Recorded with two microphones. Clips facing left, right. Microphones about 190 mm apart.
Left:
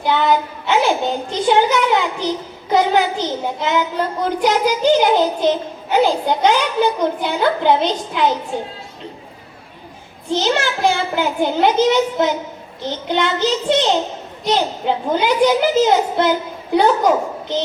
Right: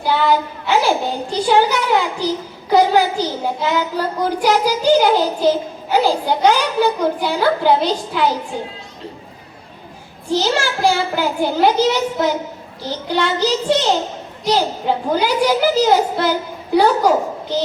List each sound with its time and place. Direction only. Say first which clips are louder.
0.0 s a child's voice: even; 20° left (ahead or behind)
10.2 s a child's voice: even; 20° left (ahead or behind)